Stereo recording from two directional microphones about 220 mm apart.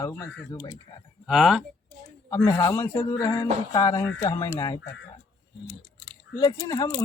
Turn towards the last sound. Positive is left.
turn(degrees=15)  # may be behind; listen again after turning